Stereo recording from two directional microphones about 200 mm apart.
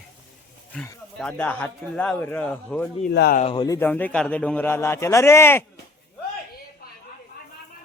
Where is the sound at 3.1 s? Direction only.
55° left (ahead or behind).